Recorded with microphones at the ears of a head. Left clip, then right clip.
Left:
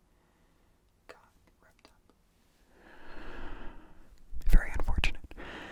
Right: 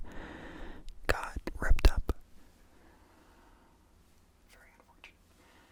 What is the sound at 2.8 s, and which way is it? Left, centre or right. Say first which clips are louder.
Snort: left 14 dB; left.